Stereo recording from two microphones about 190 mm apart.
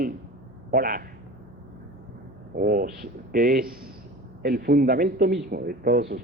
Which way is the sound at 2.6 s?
50° right (ahead or behind).